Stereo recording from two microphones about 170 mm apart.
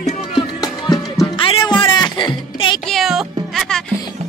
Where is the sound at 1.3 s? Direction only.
30° left (ahead or behind).